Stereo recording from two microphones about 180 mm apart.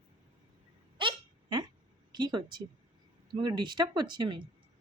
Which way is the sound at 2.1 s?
25° right (ahead or behind).